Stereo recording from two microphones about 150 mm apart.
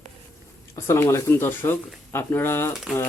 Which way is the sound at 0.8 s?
20° left (ahead or behind).